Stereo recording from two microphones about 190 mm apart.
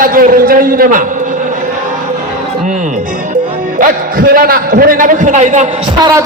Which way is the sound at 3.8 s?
50° right (ahead or behind).